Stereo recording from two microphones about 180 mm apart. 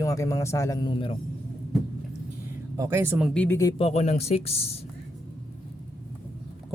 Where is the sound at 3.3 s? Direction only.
10° left (ahead or behind).